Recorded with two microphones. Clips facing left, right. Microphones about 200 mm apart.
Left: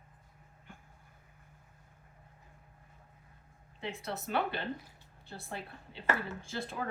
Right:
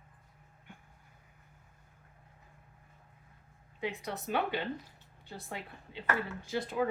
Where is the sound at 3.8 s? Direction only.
15° right (ahead or behind).